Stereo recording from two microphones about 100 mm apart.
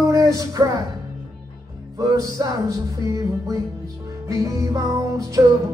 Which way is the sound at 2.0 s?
35° right (ahead or behind).